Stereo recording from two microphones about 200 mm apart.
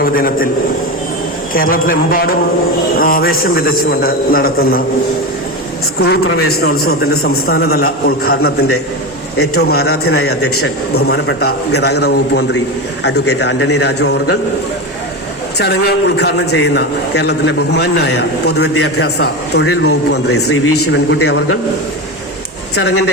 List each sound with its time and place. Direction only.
0.0 s a man's voice: 45° left (ahead or behind)
1.5 s a man's voice: 45° left (ahead or behind)
6.3 s a man's voice: 50° left (ahead or behind)
15.5 s a man's voice: 55° left (ahead or behind)
19.6 s a man's voice: 90° left